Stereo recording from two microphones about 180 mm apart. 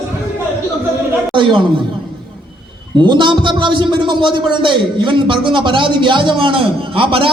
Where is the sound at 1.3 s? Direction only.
25° right (ahead or behind).